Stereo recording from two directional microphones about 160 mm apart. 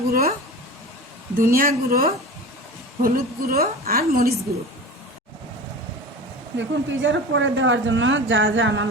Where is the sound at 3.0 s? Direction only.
70° right (ahead or behind).